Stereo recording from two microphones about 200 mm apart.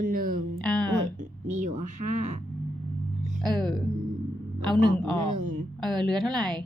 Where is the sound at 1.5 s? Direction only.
40° right (ahead or behind).